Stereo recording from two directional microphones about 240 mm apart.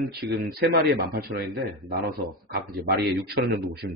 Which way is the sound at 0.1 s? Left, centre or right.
Right.